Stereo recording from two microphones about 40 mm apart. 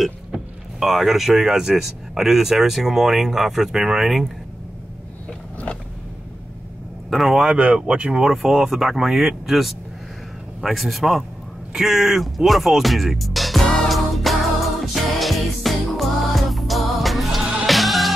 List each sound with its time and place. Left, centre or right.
0.7 s speech: centre
7.1 s speech: centre
7.7 s speech: right
8.3 s speech: centre
13.8 s music: centre